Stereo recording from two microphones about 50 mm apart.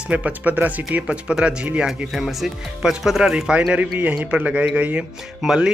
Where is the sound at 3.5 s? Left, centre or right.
Right.